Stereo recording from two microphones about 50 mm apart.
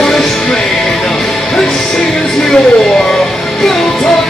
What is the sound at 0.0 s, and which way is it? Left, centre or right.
Music, centre.